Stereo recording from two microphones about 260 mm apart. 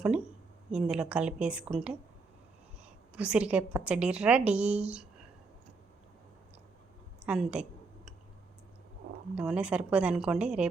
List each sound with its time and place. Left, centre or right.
0.7 s a woman's voice: centre
3.2 s a woman's voice: centre
7.3 s a sound: centre
9.3 s a woman's voice: centre